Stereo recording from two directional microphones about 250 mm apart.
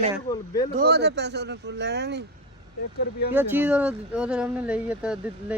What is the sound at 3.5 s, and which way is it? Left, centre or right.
Speech, centre.